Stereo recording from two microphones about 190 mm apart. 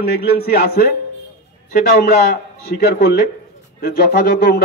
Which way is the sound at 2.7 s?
55° left (ahead or behind).